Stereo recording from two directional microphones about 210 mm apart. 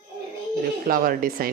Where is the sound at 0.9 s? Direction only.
45° right (ahead or behind).